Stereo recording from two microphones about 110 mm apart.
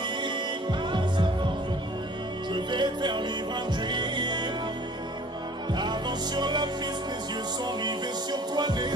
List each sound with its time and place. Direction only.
0.2 s music: 45° right (ahead or behind)
2.5 s music: 45° right (ahead or behind)
5.7 s music: 40° right (ahead or behind)